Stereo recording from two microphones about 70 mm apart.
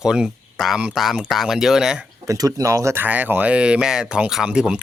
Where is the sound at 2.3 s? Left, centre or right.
Right.